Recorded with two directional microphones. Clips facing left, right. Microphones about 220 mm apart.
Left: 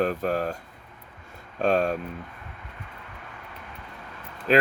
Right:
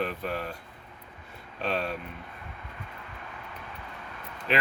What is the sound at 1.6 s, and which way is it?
Speech, 45° left (ahead or behind).